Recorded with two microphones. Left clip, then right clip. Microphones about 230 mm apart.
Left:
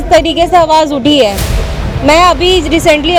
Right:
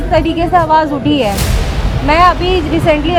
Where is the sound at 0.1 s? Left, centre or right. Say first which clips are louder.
Left 5 dB; left.